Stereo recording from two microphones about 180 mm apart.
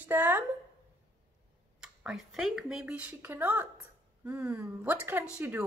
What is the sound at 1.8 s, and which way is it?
A woman's voice, 5° right (ahead or behind).